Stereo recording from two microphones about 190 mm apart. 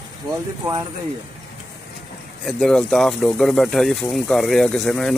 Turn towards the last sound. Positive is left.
turn(degrees=0)  # may be behind; listen again after turning